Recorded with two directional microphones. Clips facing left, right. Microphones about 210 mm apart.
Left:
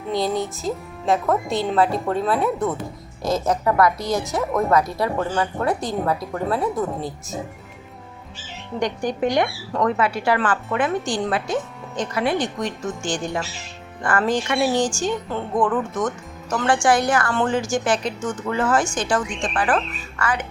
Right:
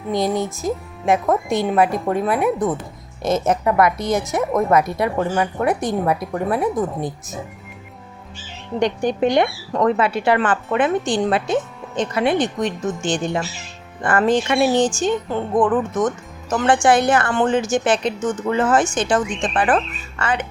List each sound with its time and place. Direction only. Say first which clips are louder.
0.1 s speech: right 2 dB; 20° right (ahead or behind)
8.8 s speech: right 4 dB; 25° right (ahead or behind)